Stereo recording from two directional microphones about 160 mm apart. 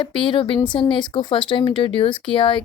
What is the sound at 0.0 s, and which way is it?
Speech, 30° left (ahead or behind).